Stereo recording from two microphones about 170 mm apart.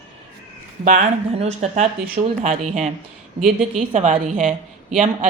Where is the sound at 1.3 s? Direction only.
40° right (ahead or behind).